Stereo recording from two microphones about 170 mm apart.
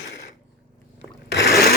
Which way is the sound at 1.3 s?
80° left.